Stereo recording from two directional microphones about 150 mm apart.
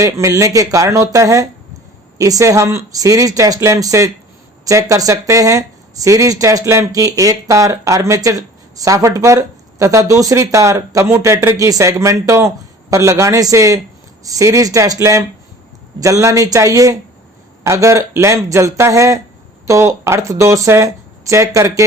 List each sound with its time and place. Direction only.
0.0 s speech: 20° right (ahead or behind)